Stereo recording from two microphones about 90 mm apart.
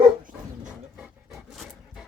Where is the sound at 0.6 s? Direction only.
5° right (ahead or behind).